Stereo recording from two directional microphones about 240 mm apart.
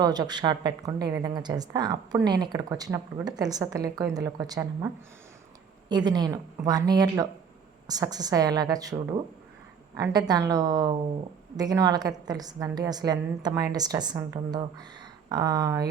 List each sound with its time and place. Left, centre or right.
0.0 s a woman's voice: centre
6.1 s a woman's voice: centre